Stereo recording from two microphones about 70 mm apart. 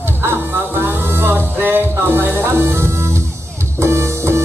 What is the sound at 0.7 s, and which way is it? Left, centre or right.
Music, right.